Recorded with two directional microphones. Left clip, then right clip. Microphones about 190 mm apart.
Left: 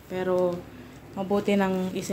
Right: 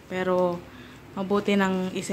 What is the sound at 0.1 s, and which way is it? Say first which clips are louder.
A woman's voice: right 1 dB; 5° right (ahead or behind).